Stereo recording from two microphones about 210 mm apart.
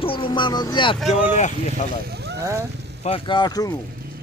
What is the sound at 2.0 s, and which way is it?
Boat, 50° right (ahead or behind).